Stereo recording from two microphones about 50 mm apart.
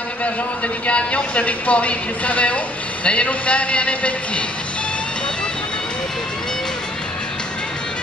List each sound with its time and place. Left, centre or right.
0.8 s speech: left